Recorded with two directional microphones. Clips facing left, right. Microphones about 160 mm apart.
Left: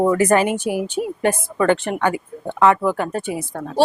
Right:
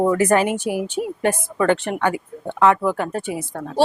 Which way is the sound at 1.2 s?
15° left (ahead or behind).